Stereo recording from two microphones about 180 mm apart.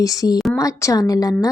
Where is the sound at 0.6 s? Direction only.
20° left (ahead or behind).